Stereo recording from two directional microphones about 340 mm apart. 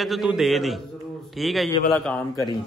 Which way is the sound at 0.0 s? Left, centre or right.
Centre.